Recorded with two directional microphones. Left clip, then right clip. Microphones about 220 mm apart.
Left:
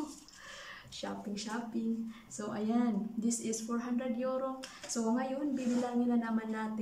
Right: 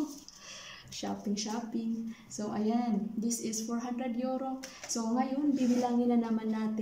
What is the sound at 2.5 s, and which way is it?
Speech, 5° right (ahead or behind).